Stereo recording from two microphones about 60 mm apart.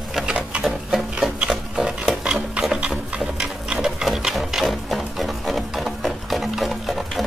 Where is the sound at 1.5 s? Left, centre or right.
Centre.